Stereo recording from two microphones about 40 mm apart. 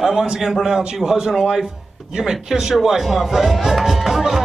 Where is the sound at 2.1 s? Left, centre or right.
Centre.